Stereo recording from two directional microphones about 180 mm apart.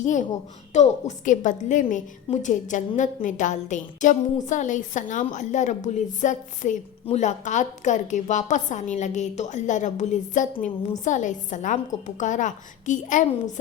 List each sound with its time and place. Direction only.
0.0 s a woman's voice: 45° left (ahead or behind)